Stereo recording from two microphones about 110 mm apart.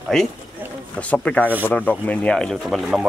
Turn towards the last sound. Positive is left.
turn(degrees=0)  # may be behind; listen again after turning